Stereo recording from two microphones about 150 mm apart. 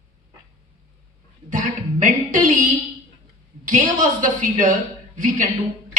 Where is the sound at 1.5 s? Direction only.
60° right (ahead or behind).